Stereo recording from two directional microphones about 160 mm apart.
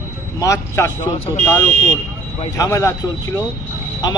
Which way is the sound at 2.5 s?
20° left (ahead or behind).